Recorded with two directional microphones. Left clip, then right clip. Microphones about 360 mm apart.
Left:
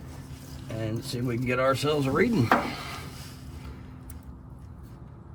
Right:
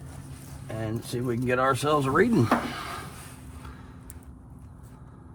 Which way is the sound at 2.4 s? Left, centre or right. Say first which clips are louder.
Left 1 dB; right.